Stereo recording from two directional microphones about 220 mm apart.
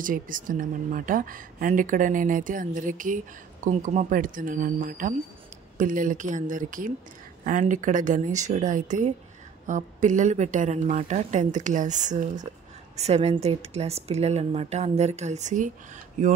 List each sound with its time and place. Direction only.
0.0 s speech: 40° right (ahead or behind)